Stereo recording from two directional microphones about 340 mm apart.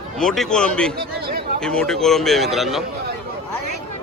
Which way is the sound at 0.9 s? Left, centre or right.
Right.